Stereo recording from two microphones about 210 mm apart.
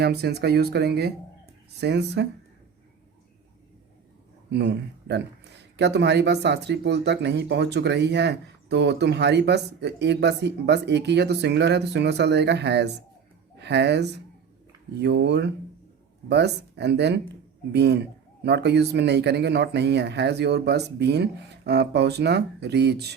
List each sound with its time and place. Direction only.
0.0 s speech: 50° right (ahead or behind)
4.5 s speech: 55° right (ahead or behind)